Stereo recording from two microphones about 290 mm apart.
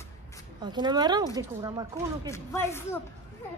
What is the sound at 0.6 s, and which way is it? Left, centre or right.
A woman's voice, centre.